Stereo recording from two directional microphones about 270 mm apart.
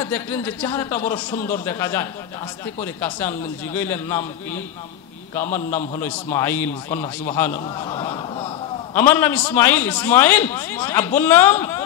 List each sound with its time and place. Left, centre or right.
0.0 s a man's voice: centre